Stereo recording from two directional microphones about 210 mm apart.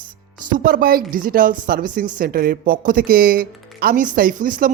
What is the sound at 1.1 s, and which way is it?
Speech, 40° right (ahead or behind).